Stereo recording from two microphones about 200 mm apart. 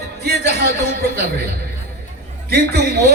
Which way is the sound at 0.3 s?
55° right (ahead or behind).